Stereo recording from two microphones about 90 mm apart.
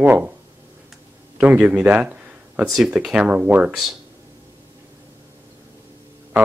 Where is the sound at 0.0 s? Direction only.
20° right (ahead or behind).